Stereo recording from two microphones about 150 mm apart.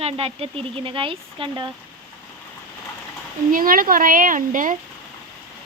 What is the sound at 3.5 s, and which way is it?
Speech, 70° right (ahead or behind).